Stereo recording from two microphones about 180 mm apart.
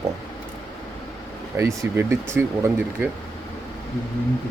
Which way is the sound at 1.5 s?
15° right (ahead or behind).